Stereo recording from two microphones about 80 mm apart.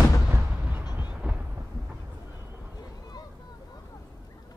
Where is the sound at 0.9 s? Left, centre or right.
Centre.